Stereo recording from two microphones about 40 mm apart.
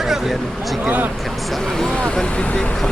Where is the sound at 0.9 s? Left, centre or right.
Right.